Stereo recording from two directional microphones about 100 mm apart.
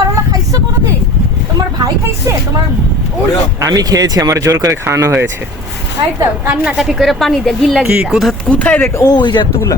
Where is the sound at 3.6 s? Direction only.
35° right (ahead or behind).